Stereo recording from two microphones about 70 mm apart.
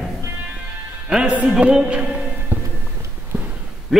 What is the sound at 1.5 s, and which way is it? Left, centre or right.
Music, centre.